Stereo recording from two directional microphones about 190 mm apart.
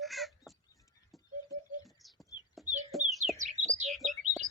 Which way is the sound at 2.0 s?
Centre (ahead or behind).